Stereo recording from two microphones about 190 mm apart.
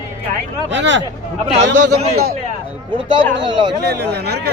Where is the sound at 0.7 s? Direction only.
70° right (ahead or behind).